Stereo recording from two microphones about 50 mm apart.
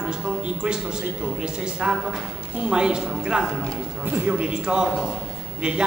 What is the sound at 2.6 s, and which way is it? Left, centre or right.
A man's voice, centre.